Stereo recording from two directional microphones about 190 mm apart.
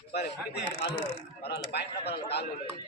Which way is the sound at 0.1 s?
60° left (ahead or behind).